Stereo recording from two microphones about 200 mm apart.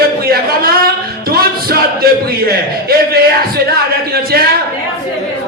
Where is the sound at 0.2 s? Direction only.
50° right (ahead or behind).